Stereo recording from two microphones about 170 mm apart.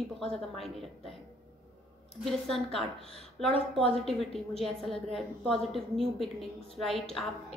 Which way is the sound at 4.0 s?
Centre (ahead or behind).